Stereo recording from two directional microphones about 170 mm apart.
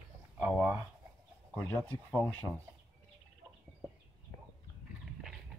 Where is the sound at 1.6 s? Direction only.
15° left (ahead or behind).